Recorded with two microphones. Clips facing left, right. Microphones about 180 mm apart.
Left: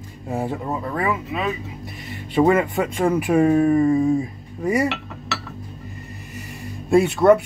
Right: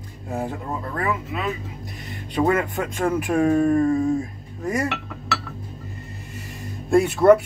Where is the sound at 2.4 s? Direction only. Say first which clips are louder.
Left 4 dB; 10° left (ahead or behind).